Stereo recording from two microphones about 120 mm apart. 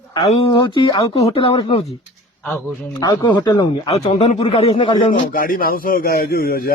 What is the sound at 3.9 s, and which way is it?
Speech, 90° left.